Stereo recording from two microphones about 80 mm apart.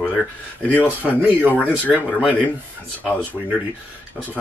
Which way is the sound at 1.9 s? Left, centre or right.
Centre.